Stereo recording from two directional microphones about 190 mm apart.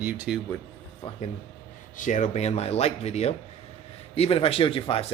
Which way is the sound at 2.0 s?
40° left (ahead or behind).